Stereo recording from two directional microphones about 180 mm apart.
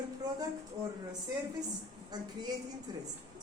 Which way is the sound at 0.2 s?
20° right (ahead or behind).